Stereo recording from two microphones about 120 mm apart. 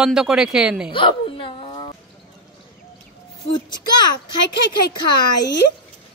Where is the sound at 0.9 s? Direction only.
45° left (ahead or behind).